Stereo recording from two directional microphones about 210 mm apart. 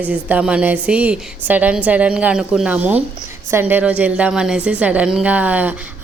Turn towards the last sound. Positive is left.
turn(degrees=-10)  # may be behind; listen again after turning